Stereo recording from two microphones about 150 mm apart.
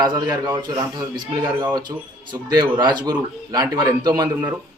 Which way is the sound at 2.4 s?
30° right (ahead or behind).